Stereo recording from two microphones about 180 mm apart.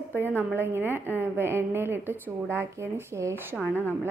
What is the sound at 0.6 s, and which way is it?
A woman's voice, 15° right (ahead or behind).